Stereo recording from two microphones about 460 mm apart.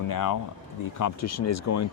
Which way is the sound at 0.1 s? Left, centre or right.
Left.